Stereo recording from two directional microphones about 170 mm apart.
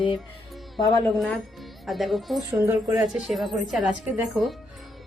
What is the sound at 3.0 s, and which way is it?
Speech, centre (ahead or behind).